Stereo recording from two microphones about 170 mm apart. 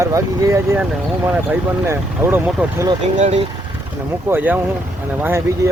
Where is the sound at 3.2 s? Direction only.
40° right (ahead or behind).